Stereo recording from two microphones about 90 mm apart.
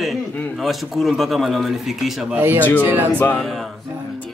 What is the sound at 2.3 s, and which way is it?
Speech, 20° right (ahead or behind).